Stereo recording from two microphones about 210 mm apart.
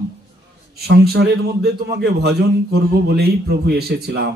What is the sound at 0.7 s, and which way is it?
A man's voice, 50° right (ahead or behind).